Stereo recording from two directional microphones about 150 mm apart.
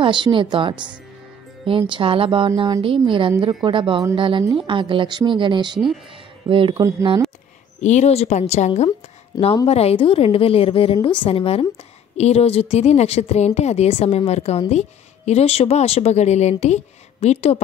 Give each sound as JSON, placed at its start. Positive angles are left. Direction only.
{"t": 0.0, "sound": "a woman's voice", "side_deg": -35}
{"t": 7.8, "sound": "a woman's voice", "side_deg": 50}